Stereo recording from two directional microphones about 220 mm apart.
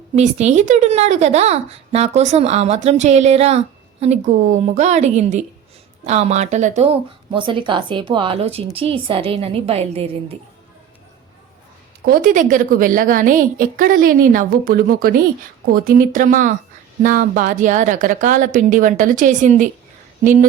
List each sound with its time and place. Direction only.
0.2 s a woman's voice: 30° right (ahead or behind)
7.3 s a woman's voice: 20° right (ahead or behind)
12.0 s a woman's voice: 35° right (ahead or behind)